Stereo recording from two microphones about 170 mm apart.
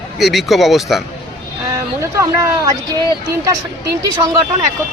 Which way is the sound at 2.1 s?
20° right (ahead or behind).